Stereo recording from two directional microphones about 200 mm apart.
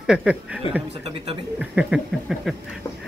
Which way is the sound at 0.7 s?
25° left (ahead or behind).